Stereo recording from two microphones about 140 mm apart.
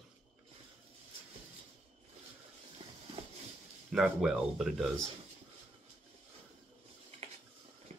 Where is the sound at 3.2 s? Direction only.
45° right (ahead or behind).